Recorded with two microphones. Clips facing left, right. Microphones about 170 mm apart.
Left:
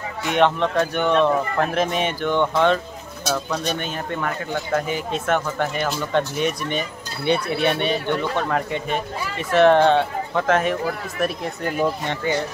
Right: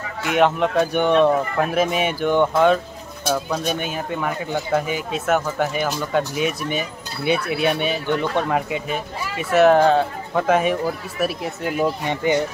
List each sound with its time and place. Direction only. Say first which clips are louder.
0.4 s speech: right 1 dB; 10° right (ahead or behind)